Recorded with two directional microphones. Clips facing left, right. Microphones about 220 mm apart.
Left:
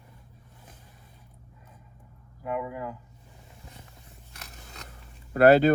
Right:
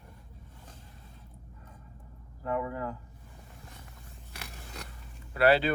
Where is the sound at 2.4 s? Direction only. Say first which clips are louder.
Even; 10° left (ahead or behind).